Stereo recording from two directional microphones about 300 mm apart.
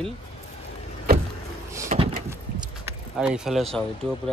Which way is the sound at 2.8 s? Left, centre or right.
Centre.